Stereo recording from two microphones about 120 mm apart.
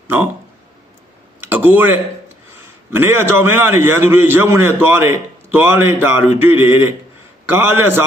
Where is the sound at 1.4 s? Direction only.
15° right (ahead or behind).